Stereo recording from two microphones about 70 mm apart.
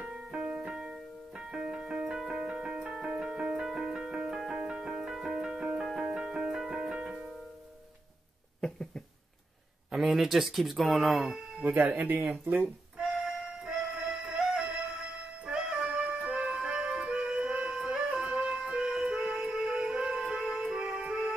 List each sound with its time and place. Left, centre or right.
0.1 s keyboard: centre
1.5 s music: centre
8.5 s a sound: centre
9.8 s speech: centre
11.6 s speech: right
12.9 s music: centre